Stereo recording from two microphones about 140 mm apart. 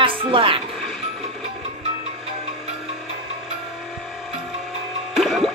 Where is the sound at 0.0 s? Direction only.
40° right (ahead or behind).